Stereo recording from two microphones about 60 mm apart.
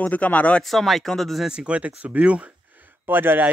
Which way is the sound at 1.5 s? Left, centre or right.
Centre.